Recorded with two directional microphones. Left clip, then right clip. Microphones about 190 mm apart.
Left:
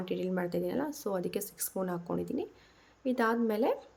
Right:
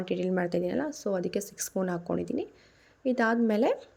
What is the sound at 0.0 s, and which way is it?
Speech, 20° right (ahead or behind).